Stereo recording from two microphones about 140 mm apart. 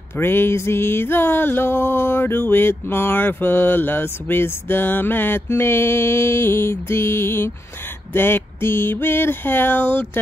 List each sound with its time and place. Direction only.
0.2 s music: 15° left (ahead or behind)